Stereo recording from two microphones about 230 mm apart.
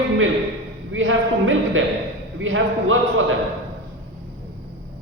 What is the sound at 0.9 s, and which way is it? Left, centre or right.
Speech, right.